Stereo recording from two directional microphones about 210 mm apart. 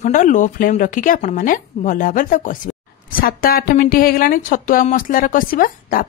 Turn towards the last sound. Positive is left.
turn(degrees=40)  # may be behind; listen again after turning